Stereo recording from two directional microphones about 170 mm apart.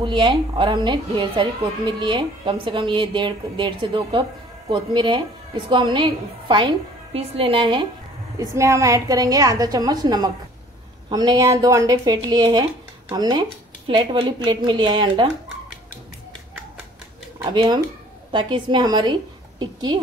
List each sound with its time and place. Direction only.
0.0 s a woman's voice: 30° right (ahead or behind)
8.4 s a woman's voice: 15° right (ahead or behind)
17.4 s a woman's voice: 25° right (ahead or behind)